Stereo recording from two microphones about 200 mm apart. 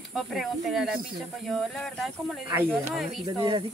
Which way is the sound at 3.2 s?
25° right (ahead or behind).